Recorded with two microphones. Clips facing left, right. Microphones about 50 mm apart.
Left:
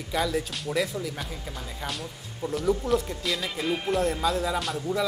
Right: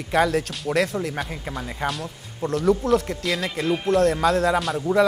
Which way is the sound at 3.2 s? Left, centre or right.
Centre.